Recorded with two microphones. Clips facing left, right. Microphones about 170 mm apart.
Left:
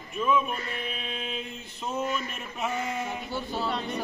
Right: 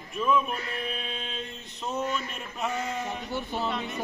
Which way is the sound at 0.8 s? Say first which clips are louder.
Even; 5° left (ahead or behind).